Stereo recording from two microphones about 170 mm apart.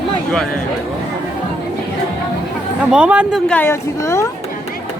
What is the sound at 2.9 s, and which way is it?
Speech, 5° right (ahead or behind).